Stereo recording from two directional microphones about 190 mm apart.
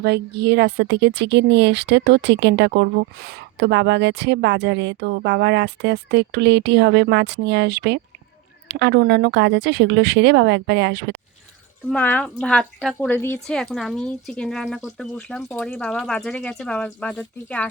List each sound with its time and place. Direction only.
0.0 s a woman's voice: 60° right (ahead or behind)
11.9 s a woman's voice: 10° left (ahead or behind)